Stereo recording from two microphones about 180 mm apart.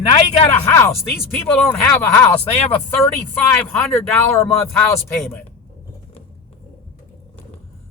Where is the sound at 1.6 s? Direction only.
10° left (ahead or behind).